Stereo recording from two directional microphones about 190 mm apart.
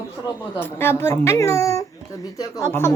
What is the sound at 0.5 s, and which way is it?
A child's voice, 10° left (ahead or behind).